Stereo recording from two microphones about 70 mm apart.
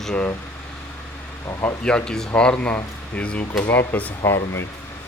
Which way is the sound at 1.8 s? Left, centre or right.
Centre.